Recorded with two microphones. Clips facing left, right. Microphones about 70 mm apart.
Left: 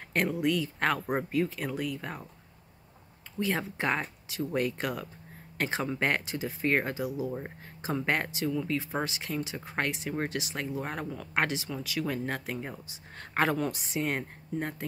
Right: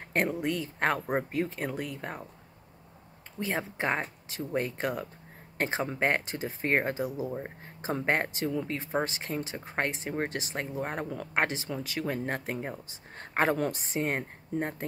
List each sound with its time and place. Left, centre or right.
0.0 s speech: right
3.3 s speech: right